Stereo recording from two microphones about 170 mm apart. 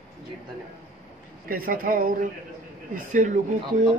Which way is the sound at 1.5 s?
55° right (ahead or behind).